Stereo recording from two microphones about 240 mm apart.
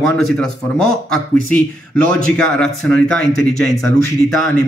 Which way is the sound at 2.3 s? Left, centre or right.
Centre.